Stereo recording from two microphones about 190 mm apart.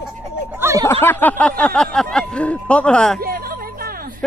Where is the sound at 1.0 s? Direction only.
10° left (ahead or behind).